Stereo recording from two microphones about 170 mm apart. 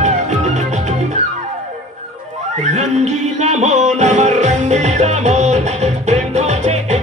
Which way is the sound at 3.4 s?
40° right (ahead or behind).